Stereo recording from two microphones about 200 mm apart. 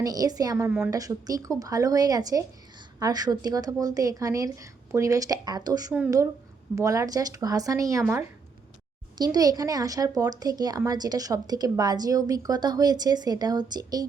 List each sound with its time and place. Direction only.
0.0 s a woman's voice: 20° right (ahead or behind)